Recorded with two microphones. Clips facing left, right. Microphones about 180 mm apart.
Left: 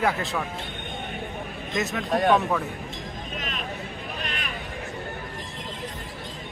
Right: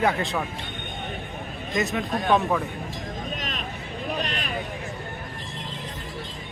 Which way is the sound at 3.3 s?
40° right (ahead or behind).